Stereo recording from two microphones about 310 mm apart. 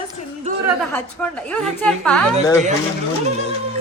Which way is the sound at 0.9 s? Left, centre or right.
Centre.